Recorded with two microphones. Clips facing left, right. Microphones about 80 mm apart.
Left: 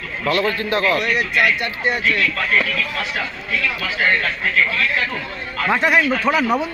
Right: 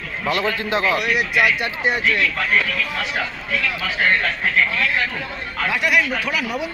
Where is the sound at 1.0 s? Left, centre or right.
Centre.